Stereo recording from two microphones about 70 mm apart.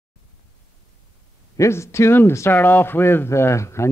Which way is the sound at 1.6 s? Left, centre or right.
Left.